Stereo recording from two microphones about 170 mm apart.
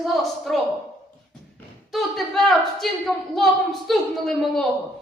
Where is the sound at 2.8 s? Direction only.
Centre (ahead or behind).